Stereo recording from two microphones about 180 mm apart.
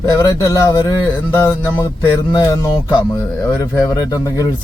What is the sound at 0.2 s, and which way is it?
Speech, 15° left (ahead or behind).